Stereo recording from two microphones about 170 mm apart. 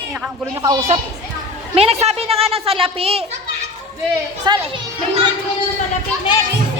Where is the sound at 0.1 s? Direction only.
15° right (ahead or behind).